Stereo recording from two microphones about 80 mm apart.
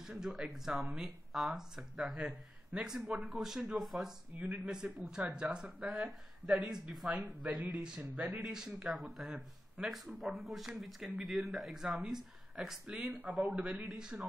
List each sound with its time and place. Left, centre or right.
0.0 s speech: centre